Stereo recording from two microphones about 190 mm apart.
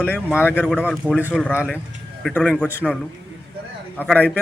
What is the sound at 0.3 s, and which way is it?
A man's voice, 10° left (ahead or behind).